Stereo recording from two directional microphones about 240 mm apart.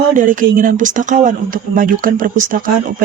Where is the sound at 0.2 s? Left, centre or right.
Right.